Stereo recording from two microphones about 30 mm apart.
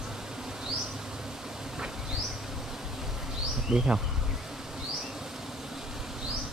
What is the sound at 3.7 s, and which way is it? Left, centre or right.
Bee, right.